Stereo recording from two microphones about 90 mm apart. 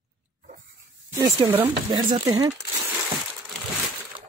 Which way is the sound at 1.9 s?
65° right (ahead or behind).